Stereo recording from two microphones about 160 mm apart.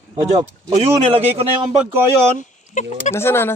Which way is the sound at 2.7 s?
50° left (ahead or behind).